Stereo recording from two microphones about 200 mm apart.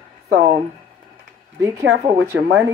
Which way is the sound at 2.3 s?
75° right (ahead or behind).